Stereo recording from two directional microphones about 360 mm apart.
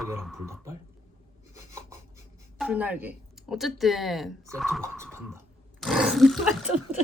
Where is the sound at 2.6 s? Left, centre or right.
Centre.